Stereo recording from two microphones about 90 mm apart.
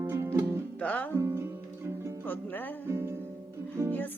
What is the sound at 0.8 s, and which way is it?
Music, 15° left (ahead or behind).